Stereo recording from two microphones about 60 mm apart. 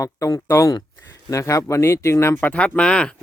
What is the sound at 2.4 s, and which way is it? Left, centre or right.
Speech, centre.